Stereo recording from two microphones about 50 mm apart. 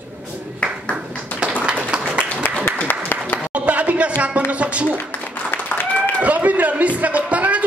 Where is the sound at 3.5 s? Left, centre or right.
Right.